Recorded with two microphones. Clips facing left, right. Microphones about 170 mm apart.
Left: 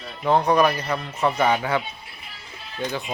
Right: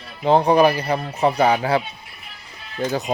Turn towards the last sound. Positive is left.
turn(degrees=-40)  # may be behind; listen again after turning